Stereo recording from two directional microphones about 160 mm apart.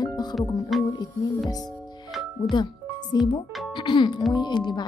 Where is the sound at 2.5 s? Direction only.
30° left (ahead or behind).